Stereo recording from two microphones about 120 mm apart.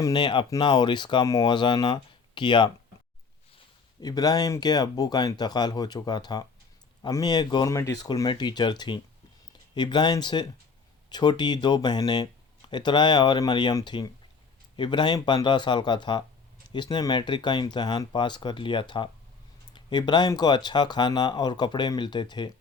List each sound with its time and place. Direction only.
0.0 s speech: 40° left (ahead or behind)
4.0 s speech: 30° left (ahead or behind)